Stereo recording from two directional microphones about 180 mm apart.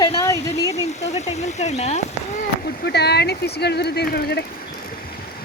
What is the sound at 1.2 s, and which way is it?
Speech, 35° left (ahead or behind).